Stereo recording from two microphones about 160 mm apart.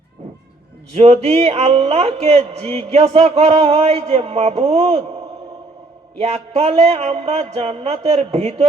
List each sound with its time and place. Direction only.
0.9 s speech: 40° right (ahead or behind)
6.1 s speech: 40° right (ahead or behind)